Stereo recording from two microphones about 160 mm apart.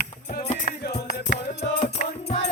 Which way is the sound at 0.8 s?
75° left (ahead or behind).